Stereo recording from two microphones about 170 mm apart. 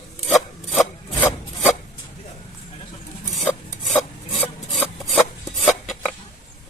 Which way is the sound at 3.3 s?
Centre (ahead or behind).